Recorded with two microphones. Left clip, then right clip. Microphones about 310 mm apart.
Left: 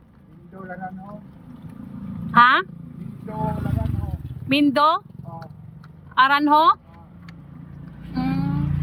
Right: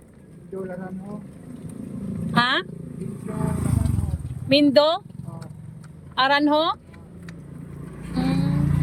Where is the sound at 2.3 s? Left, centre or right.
Centre.